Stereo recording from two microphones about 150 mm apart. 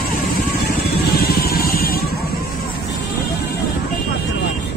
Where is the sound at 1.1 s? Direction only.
90° left.